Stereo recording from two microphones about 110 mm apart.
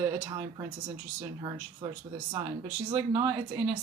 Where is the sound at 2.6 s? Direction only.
25° right (ahead or behind).